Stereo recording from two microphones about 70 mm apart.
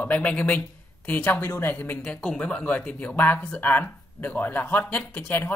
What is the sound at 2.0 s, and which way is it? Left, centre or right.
Speech, centre.